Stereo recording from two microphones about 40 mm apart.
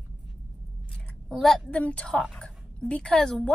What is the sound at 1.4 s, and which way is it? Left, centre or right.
Speech, centre.